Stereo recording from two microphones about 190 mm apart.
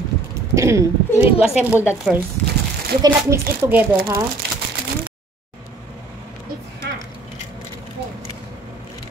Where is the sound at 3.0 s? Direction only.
15° right (ahead or behind).